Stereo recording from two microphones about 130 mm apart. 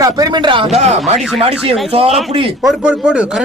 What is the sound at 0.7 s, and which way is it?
A man's voice, 55° right (ahead or behind).